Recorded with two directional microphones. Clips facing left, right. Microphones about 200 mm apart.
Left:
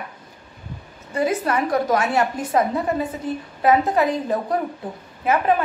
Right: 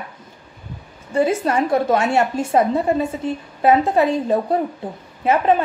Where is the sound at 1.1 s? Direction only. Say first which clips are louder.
Right 3 dB; 25° right (ahead or behind).